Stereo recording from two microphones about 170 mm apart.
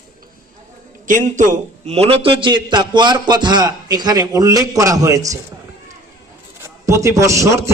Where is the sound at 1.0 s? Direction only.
50° right (ahead or behind); by 5.4 s 20° right (ahead or behind).